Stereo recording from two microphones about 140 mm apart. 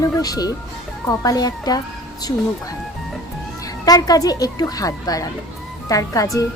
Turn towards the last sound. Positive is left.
turn(degrees=25)  # may be behind; listen again after turning